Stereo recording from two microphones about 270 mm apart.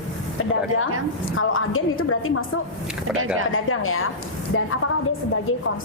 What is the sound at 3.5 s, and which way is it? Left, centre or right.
A woman's voice, left.